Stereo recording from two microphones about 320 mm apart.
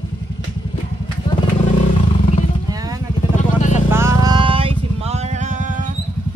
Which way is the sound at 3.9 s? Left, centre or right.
Centre.